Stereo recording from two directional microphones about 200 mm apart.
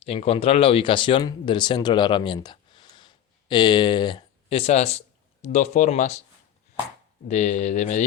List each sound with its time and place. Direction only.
0.0 s speech: 30° left (ahead or behind)
7.3 s speech: 35° left (ahead or behind)